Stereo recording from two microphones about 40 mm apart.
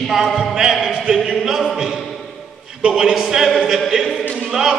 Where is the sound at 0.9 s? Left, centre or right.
Centre.